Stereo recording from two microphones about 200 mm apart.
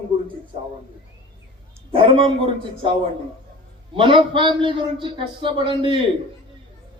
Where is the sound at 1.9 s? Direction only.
25° right (ahead or behind).